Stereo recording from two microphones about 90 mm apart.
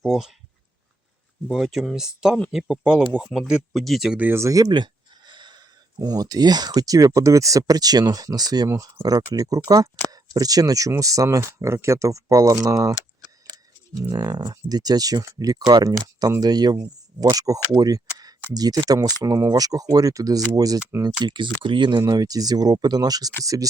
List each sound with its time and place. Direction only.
0.0 s speech: 5° right (ahead or behind)
1.5 s speech: 5° right (ahead or behind)
4.2 s speech: 25° right (ahead or behind)
4.4 s speech: 40° right (ahead or behind)
4.7 s speech: 55° right (ahead or behind)
21.0 s speech: 60° right (ahead or behind); by 23.6 s 40° right (ahead or behind)